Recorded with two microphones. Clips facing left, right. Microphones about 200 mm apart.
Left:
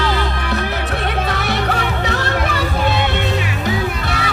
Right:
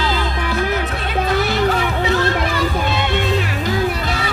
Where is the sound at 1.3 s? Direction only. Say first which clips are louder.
Right 3 dB; 65° left (ahead or behind).